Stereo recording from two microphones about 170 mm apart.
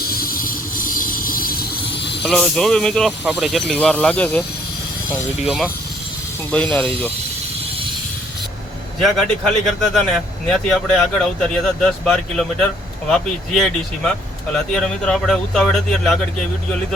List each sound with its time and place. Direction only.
0.0 s train: 60° left (ahead or behind)
2.2 s speech: centre (ahead or behind)
5.4 s speech: 5° right (ahead or behind)
9.0 s speech: centre (ahead or behind)